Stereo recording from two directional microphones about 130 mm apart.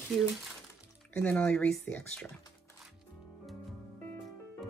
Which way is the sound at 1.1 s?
10° left (ahead or behind).